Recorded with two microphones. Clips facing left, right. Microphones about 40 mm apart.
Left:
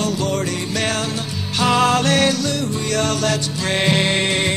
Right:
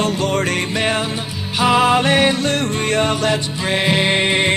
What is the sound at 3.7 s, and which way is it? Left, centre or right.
Music, centre.